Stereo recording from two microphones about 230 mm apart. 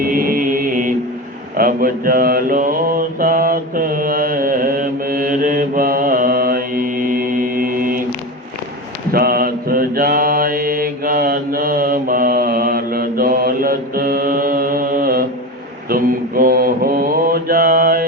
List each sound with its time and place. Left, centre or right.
0.0 s chant: right
1.5 s mantra: right
9.1 s mantra: right